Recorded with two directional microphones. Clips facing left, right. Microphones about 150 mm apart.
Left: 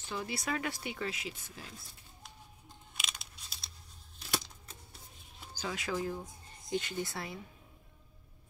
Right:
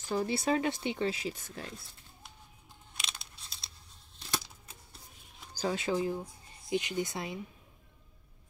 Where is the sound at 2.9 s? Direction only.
5° left (ahead or behind).